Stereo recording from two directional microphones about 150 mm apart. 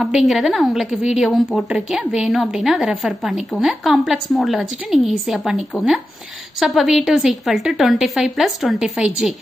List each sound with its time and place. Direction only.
0.0 s a woman's voice: centre (ahead or behind)